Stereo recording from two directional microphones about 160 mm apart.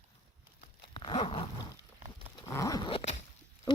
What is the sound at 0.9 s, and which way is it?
Dog, 30° left (ahead or behind).